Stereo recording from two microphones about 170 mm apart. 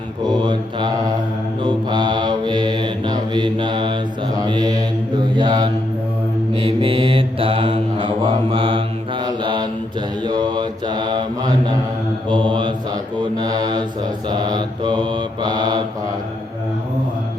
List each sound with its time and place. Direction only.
0.3 s mantra: 25° right (ahead or behind)